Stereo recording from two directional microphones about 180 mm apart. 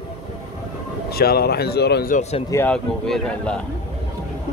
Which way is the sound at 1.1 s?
60° left (ahead or behind).